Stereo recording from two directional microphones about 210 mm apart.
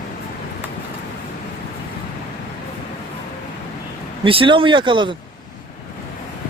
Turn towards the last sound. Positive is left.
turn(degrees=-25)  # may be behind; listen again after turning